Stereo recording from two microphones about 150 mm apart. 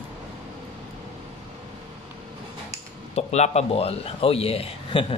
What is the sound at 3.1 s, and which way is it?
A man's voice, 45° left (ahead or behind).